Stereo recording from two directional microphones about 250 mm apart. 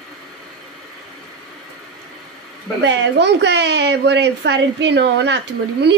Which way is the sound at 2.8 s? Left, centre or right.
Right.